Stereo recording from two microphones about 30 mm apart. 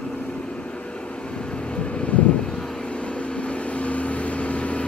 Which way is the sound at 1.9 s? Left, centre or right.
Left.